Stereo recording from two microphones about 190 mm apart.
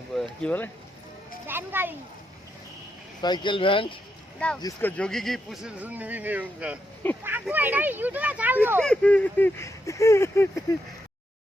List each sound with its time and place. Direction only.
0.2 s speech: 5° left (ahead or behind)
1.5 s speech: 10° right (ahead or behind)
3.2 s speech: 20° left (ahead or behind)
4.4 s speech: 5° left (ahead or behind); by 8.8 s 10° right (ahead or behind)
8.8 s speech: 5° left (ahead or behind)